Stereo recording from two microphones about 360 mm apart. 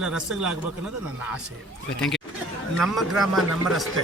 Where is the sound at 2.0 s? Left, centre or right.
Centre.